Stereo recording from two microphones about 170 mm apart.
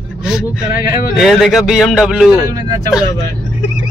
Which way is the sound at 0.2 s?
Centre (ahead or behind).